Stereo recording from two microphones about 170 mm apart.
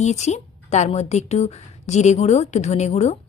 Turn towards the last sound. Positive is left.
turn(degrees=40)  # may be behind; listen again after turning